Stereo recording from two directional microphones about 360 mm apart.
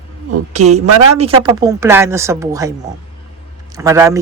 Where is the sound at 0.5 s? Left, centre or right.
Centre.